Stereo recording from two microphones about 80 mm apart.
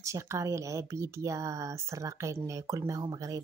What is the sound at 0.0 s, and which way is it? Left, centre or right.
Speech, right.